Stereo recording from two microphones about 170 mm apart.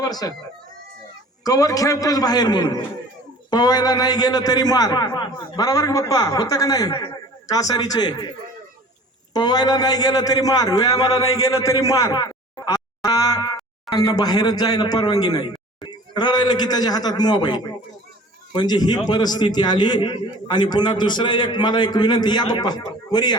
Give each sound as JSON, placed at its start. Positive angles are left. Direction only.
{"t": 0.0, "sound": "a man's voice", "side_deg": 20}
{"t": 1.5, "sound": "a man's voice", "side_deg": 20}
{"t": 9.3, "sound": "a man's voice", "side_deg": 25}